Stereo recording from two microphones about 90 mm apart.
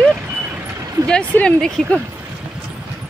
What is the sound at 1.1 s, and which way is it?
Speech, 10° left (ahead or behind).